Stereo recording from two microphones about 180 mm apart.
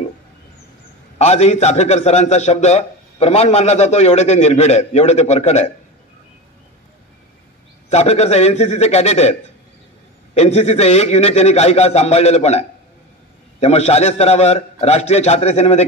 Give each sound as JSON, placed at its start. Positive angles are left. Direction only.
{"t": 1.1, "sound": "a man's voice", "side_deg": 35}
{"t": 7.9, "sound": "a man's voice", "side_deg": 35}